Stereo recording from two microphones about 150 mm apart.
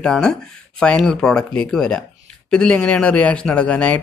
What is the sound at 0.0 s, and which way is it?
Speech, 5° left (ahead or behind).